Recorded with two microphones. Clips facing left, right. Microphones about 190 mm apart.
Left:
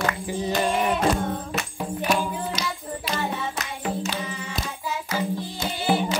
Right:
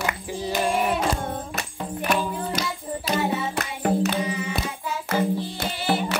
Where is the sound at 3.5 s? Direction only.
55° right (ahead or behind).